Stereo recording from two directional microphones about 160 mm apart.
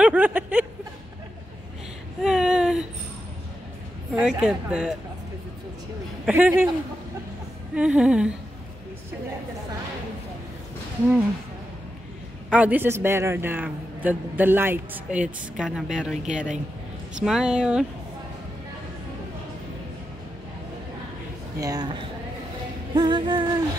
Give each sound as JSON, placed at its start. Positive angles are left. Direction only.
{"t": 0.0, "sound": "a sound", "side_deg": -10}
{"t": 2.2, "sound": "a sound", "side_deg": -5}
{"t": 4.1, "sound": "speech", "side_deg": -5}
{"t": 6.2, "sound": "a woman's voice", "side_deg": -10}
{"t": 7.7, "sound": "a woman's voice", "side_deg": -5}
{"t": 12.4, "sound": "a woman's voice", "side_deg": -10}
{"t": 21.5, "sound": "music", "side_deg": -25}
{"t": 22.9, "sound": "music", "side_deg": -30}